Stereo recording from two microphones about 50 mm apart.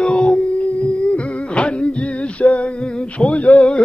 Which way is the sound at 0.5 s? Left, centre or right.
Left.